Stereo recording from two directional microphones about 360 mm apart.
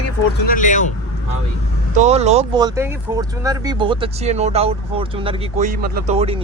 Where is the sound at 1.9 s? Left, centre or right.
Centre.